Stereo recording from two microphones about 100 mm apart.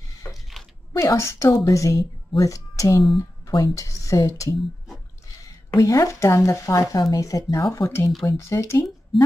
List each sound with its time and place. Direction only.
0.2 s a sound: 30° left (ahead or behind)
0.9 s speech: 30° left (ahead or behind)
5.8 s speech: 35° left (ahead or behind)
9.1 s a woman's voice: centre (ahead or behind)